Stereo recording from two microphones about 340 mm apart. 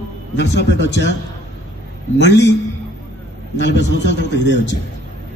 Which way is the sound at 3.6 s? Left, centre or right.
Left.